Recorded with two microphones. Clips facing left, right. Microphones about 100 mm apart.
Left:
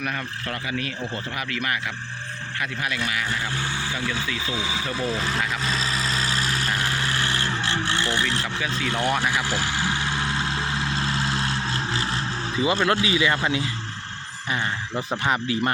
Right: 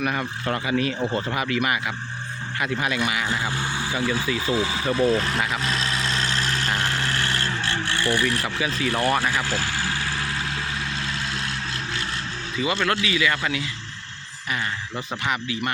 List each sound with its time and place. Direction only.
0.0 s speech: 10° right (ahead or behind)
0.4 s speech: 25° right (ahead or behind); by 4.3 s 10° right (ahead or behind)
4.5 s speech: centre (ahead or behind)
4.9 s vehicle: centre (ahead or behind); by 8.4 s 25° left (ahead or behind)
9.0 s speech: 10° right (ahead or behind)
9.2 s vehicle: 15° left (ahead or behind)
12.8 s a man's voice: 25° left (ahead or behind)
15.3 s speech: 35° left (ahead or behind)